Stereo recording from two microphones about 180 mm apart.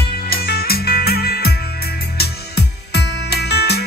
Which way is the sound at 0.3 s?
60° left (ahead or behind).